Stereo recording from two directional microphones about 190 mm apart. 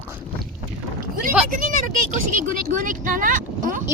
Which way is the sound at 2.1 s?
45° right (ahead or behind).